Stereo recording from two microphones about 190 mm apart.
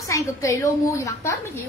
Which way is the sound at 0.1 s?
15° left (ahead or behind).